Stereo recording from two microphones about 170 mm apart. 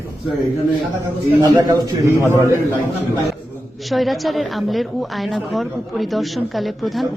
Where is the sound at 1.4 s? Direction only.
25° right (ahead or behind).